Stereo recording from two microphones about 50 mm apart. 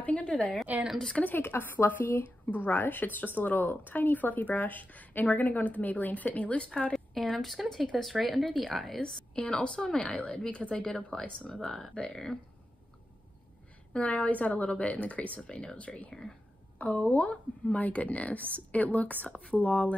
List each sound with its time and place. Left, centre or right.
0.0 s a sound: left
1.1 s speech: left
1.4 s speech: left
7.3 s a woman's voice: centre
9.3 s a woman's voice: left
13.9 s a woman's voice: left
16.1 s speech: centre
16.7 s a woman's voice: left
19.2 s a woman's voice: centre
19.5 s speech: left